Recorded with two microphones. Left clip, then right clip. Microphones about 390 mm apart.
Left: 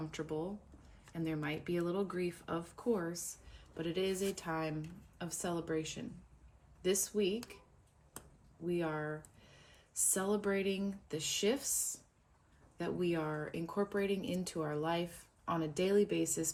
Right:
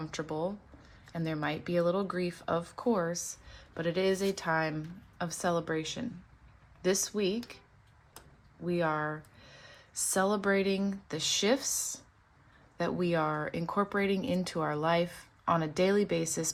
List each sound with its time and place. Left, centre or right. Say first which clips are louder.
0.1 s speech: right 9 dB; centre
8.6 s speech: right 7 dB; centre
10.1 s speech: right 7 dB; centre
12.7 s speech: right 6 dB; centre